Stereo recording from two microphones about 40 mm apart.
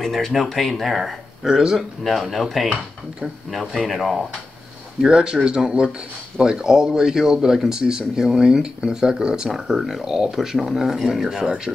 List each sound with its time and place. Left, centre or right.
0.3 s speech: centre
2.3 s speech: centre
5.0 s speech: centre
9.5 s speech: centre